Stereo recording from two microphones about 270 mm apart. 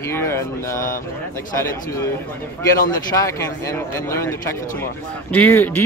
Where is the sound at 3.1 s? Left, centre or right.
Centre.